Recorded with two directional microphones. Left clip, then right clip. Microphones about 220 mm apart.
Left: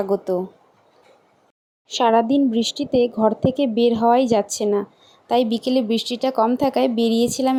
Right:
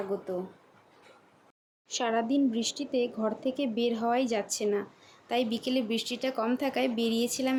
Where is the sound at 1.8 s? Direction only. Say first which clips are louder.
Left 12 dB; 30° left (ahead or behind).